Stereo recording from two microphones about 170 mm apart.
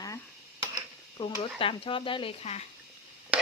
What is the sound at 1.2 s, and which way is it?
Speech, 30° left (ahead or behind).